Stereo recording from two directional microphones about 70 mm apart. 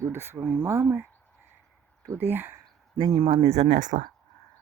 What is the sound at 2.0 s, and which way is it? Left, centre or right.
Speech, right.